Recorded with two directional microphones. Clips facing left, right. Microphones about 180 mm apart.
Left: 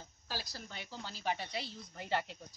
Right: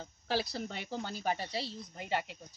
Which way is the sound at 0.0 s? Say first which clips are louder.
Right 10 dB; 65° right (ahead or behind).